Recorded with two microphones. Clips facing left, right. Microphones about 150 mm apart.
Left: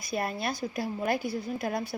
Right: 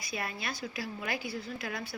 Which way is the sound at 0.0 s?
50° left (ahead or behind).